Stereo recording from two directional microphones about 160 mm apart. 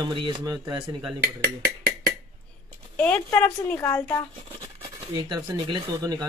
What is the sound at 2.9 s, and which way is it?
A woman's voice, 10° left (ahead or behind).